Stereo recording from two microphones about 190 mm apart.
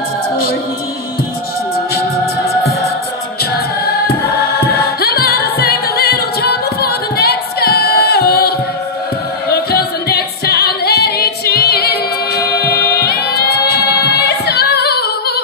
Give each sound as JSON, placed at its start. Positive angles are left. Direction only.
{"t": 3.8, "sound": "choir", "side_deg": 55}
{"t": 9.5, "sound": "music", "side_deg": 55}